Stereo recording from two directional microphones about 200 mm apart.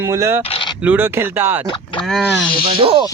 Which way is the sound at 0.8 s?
10° right (ahead or behind).